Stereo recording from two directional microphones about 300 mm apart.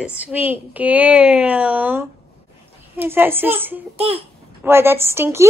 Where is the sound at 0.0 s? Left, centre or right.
Centre.